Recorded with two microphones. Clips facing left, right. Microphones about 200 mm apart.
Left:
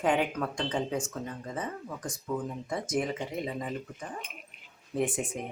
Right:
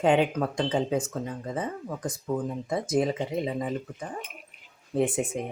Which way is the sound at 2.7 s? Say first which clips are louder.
Right 5 dB; 20° right (ahead or behind).